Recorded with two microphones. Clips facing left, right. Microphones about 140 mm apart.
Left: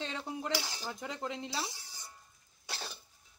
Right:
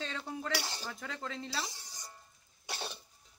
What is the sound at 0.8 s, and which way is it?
Speech, 20° left (ahead or behind).